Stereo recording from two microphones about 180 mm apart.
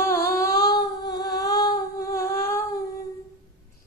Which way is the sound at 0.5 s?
20° left (ahead or behind).